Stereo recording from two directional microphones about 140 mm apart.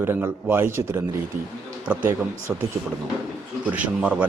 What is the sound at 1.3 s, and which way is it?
Speech, 75° right (ahead or behind).